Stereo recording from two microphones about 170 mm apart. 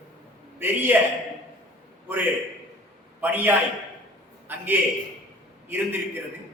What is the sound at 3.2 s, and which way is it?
Speech, 10° right (ahead or behind).